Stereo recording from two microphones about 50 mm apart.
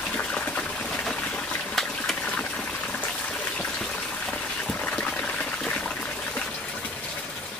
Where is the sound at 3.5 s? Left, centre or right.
Left.